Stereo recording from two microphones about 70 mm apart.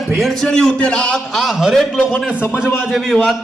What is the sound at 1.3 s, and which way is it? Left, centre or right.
Speech, centre.